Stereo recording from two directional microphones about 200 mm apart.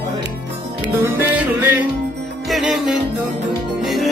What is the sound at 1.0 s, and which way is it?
Music, 10° right (ahead or behind).